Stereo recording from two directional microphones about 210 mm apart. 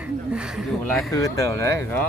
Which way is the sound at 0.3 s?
Centre (ahead or behind).